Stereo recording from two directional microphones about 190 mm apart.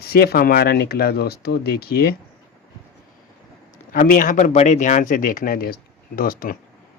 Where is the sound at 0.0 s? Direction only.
55° left (ahead or behind).